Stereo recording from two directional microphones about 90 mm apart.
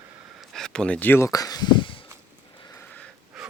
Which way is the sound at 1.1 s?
35° left (ahead or behind).